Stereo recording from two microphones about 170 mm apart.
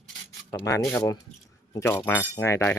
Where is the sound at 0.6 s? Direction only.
15° left (ahead or behind).